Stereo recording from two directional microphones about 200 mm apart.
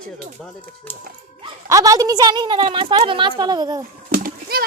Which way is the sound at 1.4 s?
15° right (ahead or behind).